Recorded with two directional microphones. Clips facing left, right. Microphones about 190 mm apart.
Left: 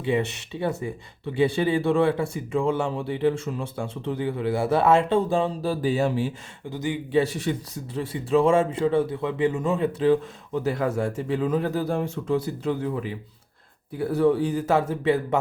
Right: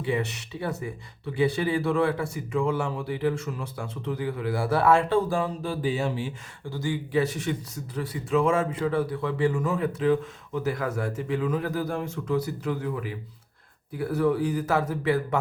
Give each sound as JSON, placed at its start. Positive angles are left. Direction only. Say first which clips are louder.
{"t": 0.0, "sound": "a man's voice", "louder": "left 3 dB", "side_deg": 25}
{"t": 5.6, "sound": "speech", "louder": "left 4 dB", "side_deg": 40}
{"t": 6.7, "sound": "a man's voice", "louder": "left 2 dB", "side_deg": 20}